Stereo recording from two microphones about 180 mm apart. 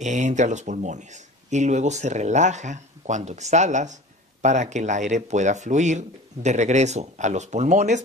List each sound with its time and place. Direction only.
0.0 s speech: 40° right (ahead or behind)